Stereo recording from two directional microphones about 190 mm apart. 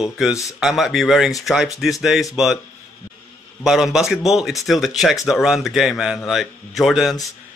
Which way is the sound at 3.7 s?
Centre (ahead or behind).